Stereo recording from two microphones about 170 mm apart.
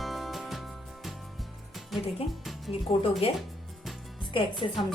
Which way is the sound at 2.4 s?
Centre (ahead or behind).